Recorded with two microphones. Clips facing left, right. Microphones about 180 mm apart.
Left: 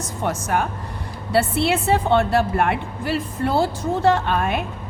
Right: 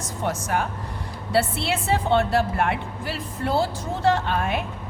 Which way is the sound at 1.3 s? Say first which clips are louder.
Left 4 dB; 55° left (ahead or behind).